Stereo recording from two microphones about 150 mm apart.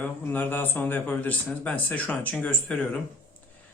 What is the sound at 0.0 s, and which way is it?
Speech, 10° left (ahead or behind).